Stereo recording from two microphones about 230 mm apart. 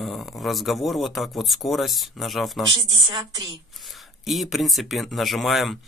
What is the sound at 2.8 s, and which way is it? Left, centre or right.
Speech, centre.